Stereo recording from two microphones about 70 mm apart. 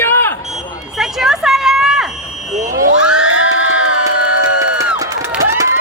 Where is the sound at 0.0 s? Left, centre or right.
Left.